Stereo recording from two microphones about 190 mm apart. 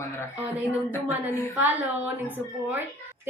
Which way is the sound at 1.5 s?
10° right (ahead or behind).